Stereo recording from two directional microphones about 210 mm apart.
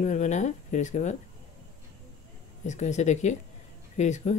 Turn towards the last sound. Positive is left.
turn(degrees=35)  # may be behind; listen again after turning